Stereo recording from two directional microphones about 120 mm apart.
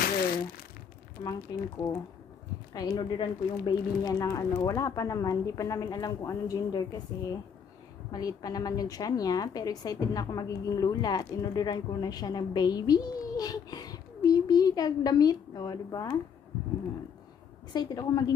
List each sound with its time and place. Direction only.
1.2 s a woman's voice: 35° left (ahead or behind)
17.7 s a woman's voice: 35° left (ahead or behind)